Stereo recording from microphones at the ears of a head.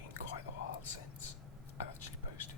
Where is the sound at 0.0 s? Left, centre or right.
Left.